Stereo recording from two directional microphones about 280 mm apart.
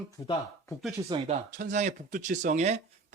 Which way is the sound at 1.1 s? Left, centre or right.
Right.